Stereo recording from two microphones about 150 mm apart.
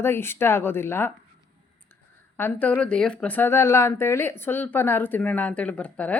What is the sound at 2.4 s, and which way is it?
Speech, 10° left (ahead or behind).